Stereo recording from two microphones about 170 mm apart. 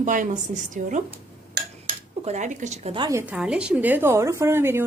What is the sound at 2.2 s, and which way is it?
Speech, 45° right (ahead or behind).